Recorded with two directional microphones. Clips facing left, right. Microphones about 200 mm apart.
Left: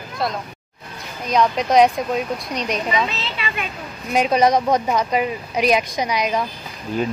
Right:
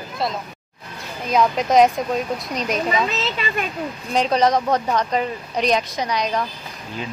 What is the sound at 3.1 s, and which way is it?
Speech, 45° right (ahead or behind).